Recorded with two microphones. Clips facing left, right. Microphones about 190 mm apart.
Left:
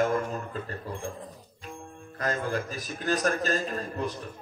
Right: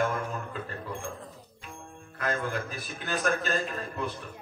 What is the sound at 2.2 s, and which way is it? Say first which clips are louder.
Mantra: left 2 dB; 40° left (ahead or behind).